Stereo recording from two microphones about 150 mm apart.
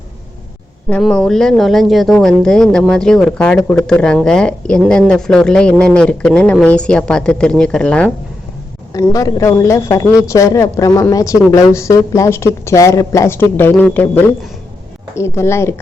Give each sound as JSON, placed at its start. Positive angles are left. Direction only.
{"t": 0.9, "sound": "speech", "side_deg": 5}
{"t": 8.9, "sound": "a woman's voice", "side_deg": 25}